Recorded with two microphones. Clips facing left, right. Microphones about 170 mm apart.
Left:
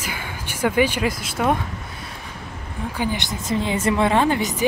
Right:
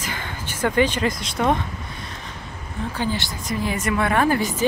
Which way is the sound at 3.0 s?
15° left (ahead or behind).